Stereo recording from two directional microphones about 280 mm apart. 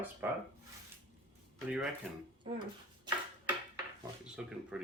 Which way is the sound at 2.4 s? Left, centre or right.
Centre.